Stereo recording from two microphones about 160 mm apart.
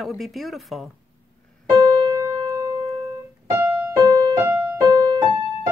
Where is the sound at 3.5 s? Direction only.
25° right (ahead or behind).